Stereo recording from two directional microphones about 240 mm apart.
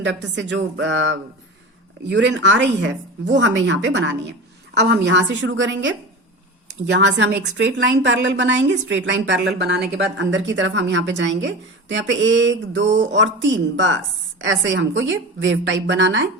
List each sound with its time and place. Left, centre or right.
0.0 s a woman's voice: right
6.9 s a woman's voice: right